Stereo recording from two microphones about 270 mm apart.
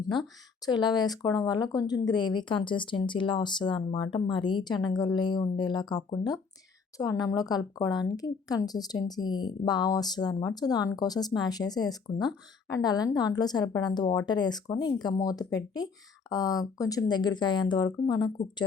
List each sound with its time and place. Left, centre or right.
0.6 s speech: centre